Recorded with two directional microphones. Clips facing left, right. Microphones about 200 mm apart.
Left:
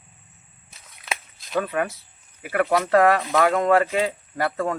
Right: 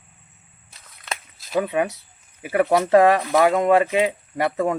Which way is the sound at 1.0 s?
Centre (ahead or behind).